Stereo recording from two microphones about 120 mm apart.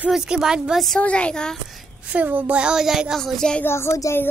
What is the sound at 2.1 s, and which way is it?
Speech, 15° right (ahead or behind).